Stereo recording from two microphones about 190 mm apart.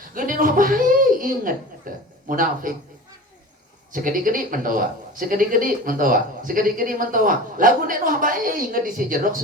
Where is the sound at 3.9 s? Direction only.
45° right (ahead or behind).